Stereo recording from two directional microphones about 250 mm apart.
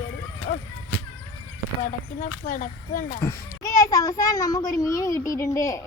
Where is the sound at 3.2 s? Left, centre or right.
Centre.